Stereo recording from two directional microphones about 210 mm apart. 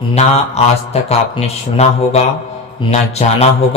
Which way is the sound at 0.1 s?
30° left (ahead or behind).